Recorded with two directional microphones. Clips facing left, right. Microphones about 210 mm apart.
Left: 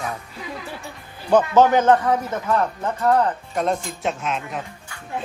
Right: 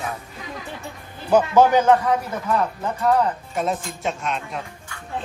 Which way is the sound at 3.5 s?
5° right (ahead or behind).